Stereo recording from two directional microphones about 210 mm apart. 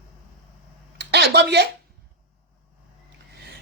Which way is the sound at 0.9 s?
55° right (ahead or behind).